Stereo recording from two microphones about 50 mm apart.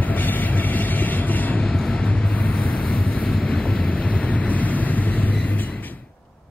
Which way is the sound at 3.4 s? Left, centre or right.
Centre.